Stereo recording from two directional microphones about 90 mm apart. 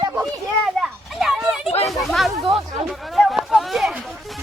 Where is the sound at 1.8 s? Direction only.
Centre (ahead or behind).